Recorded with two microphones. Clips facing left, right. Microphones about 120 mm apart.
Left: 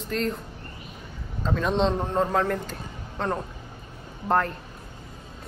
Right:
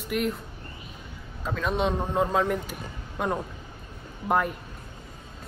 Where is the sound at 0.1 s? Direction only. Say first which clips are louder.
Even; 10° right (ahead or behind).